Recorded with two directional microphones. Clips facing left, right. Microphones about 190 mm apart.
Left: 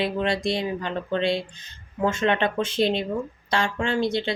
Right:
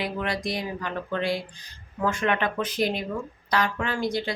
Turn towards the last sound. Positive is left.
turn(degrees=25)  # may be behind; listen again after turning